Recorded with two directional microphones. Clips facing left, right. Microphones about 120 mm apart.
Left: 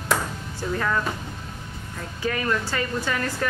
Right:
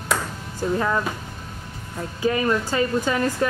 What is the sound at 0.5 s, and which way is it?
Music, 20° right (ahead or behind).